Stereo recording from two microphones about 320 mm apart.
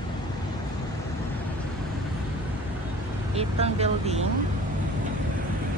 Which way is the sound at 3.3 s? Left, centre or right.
Centre.